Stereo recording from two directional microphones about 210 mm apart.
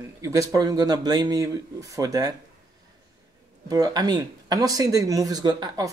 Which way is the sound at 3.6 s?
15° right (ahead or behind).